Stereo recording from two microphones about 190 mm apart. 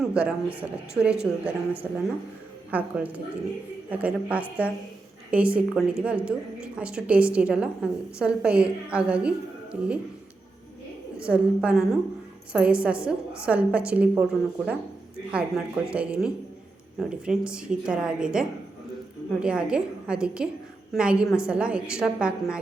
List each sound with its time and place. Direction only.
0.0 s a woman's voice: 5° right (ahead or behind)
11.2 s a woman's voice: 5° right (ahead or behind)